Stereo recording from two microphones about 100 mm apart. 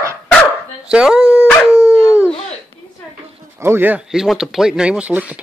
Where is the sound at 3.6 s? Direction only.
25° right (ahead or behind).